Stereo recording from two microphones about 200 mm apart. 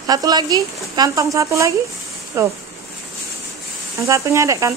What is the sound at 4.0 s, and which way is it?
Speech, 15° right (ahead or behind).